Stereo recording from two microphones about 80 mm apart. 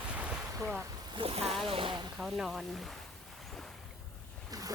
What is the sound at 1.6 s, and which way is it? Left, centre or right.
Speech, right.